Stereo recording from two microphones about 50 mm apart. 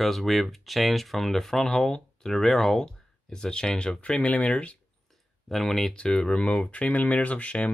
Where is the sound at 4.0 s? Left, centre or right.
Left.